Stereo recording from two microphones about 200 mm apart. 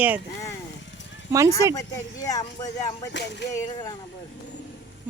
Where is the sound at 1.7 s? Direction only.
15° left (ahead or behind).